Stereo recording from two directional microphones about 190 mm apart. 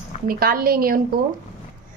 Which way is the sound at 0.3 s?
50° right (ahead or behind).